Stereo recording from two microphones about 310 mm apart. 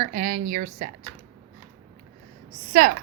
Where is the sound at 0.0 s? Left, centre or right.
Right.